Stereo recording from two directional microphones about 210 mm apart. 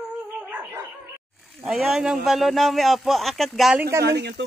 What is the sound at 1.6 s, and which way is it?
A man's voice, 5° right (ahead or behind).